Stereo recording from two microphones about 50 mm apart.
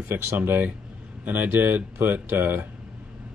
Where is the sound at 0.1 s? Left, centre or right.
Right.